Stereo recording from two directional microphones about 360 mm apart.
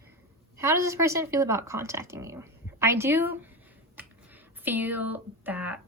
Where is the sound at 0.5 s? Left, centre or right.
Centre.